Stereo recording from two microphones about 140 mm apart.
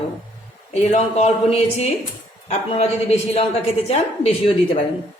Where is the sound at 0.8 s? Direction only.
50° left (ahead or behind).